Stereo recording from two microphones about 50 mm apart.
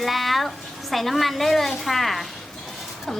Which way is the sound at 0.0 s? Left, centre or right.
Centre.